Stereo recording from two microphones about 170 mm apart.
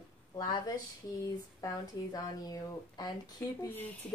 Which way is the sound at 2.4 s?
20° left (ahead or behind).